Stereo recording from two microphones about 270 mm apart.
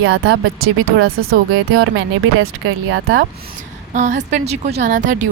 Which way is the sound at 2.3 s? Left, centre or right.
Right.